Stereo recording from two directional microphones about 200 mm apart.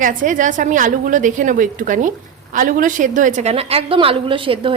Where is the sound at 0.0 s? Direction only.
40° right (ahead or behind).